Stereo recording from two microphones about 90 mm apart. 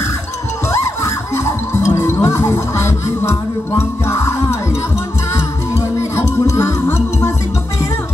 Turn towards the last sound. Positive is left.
turn(degrees=30)  # may be behind; listen again after turning